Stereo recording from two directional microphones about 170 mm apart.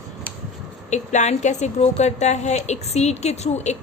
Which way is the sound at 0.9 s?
45° left (ahead or behind).